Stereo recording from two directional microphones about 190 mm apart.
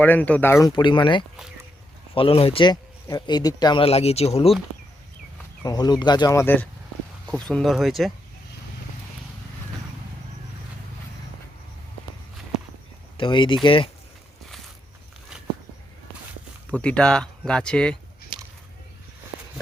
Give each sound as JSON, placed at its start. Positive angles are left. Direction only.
{"t": 0.0, "sound": "speech", "side_deg": 10}
{"t": 0.7, "sound": "speech", "side_deg": 25}
{"t": 5.6, "sound": "speech", "side_deg": 20}
{"t": 13.1, "sound": "speech", "side_deg": 25}
{"t": 16.7, "sound": "speech", "side_deg": 5}